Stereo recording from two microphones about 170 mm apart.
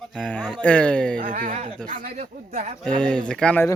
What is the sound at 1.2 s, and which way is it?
Speech, 55° right (ahead or behind).